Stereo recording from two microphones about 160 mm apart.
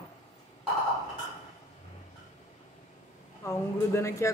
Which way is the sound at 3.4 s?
20° left (ahead or behind).